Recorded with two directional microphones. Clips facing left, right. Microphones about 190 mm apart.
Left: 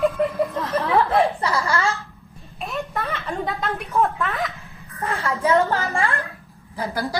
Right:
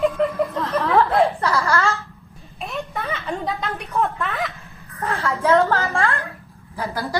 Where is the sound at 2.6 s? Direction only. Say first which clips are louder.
Left 1 dB; centre (ahead or behind).